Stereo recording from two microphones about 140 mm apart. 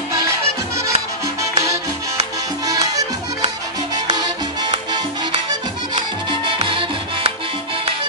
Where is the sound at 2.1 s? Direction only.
25° right (ahead or behind).